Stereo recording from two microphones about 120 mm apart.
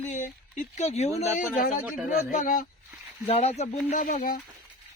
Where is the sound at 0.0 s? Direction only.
90° left.